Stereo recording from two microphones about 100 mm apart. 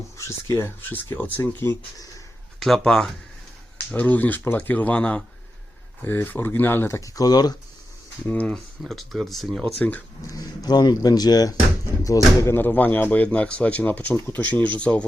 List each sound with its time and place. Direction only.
0.2 s speech: 30° left (ahead or behind)
0.8 s speech: 20° left (ahead or behind)
2.6 s speech: 5° left (ahead or behind)
3.9 s speech: 15° left (ahead or behind)
7.2 s speech: 40° left (ahead or behind)
8.3 s speech: 15° left (ahead or behind)
8.5 s speech: centre (ahead or behind)
10.2 s speech: 40° left (ahead or behind)
12.5 s speech: 20° left (ahead or behind)